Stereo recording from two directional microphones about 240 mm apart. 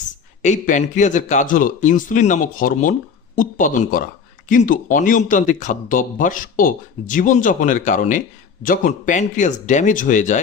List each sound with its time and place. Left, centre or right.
0.4 s speech: left